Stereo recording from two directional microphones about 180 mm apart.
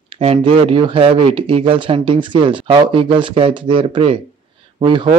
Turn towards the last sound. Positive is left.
turn(degrees=-25)  # may be behind; listen again after turning